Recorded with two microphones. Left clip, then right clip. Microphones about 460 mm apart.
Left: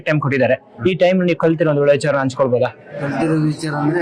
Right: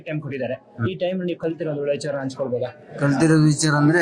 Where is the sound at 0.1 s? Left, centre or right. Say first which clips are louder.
Left 12 dB; left.